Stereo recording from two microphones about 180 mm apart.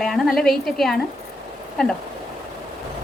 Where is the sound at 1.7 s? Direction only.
5° left (ahead or behind).